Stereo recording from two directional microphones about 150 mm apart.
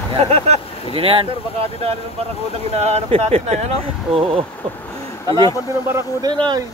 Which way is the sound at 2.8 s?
45° right (ahead or behind).